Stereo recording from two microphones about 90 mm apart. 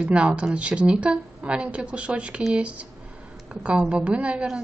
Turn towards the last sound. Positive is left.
turn(degrees=-10)  # may be behind; listen again after turning